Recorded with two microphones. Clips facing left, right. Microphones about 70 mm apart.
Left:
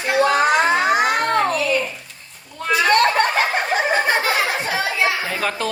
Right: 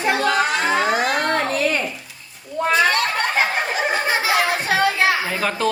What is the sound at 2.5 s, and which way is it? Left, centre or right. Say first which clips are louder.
Speech: right 2 dB; right.